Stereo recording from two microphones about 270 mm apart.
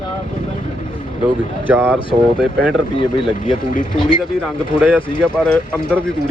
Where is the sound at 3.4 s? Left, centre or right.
Left.